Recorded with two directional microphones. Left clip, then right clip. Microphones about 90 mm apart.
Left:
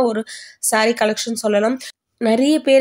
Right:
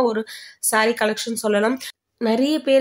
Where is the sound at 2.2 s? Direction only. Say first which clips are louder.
Left 4 dB; 35° left (ahead or behind).